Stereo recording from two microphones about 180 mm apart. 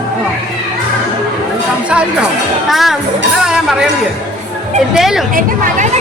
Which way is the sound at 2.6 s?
Centre (ahead or behind).